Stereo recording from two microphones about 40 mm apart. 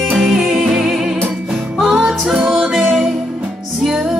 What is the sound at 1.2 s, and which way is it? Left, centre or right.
Music, centre.